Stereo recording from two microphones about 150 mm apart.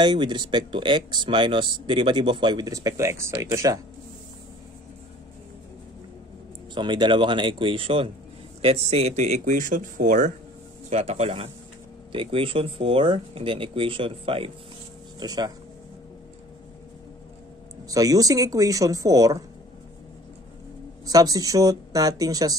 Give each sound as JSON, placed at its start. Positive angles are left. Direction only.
{"t": 0.0, "sound": "speech", "side_deg": -30}
{"t": 6.7, "sound": "speech", "side_deg": -30}
{"t": 15.1, "sound": "speech", "side_deg": -25}
{"t": 17.8, "sound": "speech", "side_deg": -25}
{"t": 21.0, "sound": "speech", "side_deg": -25}